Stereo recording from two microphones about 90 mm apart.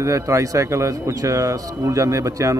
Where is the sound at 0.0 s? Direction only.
35° right (ahead or behind).